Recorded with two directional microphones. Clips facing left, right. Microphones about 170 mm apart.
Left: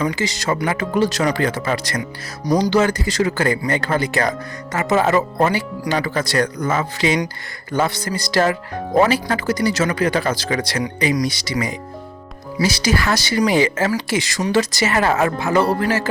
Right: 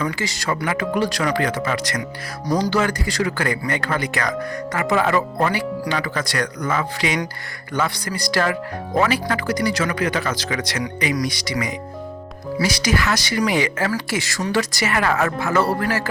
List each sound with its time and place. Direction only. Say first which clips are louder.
0.0 s speech: left 3 dB; 20° left (ahead or behind)